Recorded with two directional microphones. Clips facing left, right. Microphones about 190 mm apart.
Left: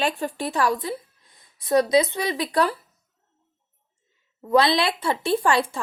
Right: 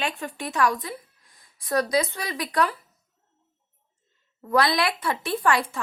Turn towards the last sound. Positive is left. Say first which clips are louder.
# left 3 dB
turn(degrees=30)  # may be behind; listen again after turning